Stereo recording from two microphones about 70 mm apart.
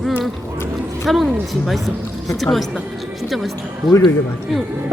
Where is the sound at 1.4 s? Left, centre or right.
Centre.